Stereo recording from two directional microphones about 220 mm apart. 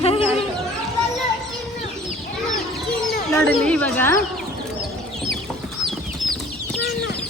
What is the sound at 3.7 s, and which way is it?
Speech, 5° left (ahead or behind).